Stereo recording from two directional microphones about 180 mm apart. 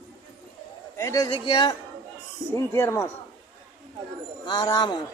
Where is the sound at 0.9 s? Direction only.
15° left (ahead or behind).